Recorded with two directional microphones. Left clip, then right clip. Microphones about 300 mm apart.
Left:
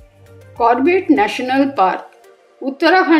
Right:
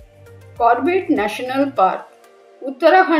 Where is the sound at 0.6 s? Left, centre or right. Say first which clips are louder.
Left 2 dB; left.